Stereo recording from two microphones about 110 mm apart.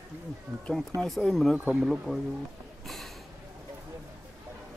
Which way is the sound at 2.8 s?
Centre (ahead or behind).